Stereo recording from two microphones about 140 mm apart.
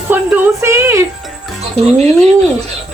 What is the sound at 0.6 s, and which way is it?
Speech, 20° right (ahead or behind).